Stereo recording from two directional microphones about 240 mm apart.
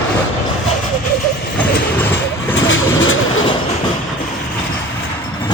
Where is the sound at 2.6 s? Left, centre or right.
Left.